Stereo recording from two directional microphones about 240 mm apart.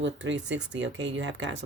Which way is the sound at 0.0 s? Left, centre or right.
Right.